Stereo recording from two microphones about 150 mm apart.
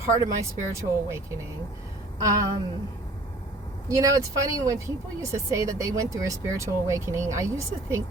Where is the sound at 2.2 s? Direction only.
20° right (ahead or behind).